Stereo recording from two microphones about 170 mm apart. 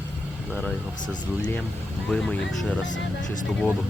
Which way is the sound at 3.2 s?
50° left (ahead or behind).